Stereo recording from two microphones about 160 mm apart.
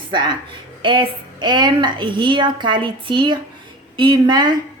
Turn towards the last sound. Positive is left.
turn(degrees=-25)  # may be behind; listen again after turning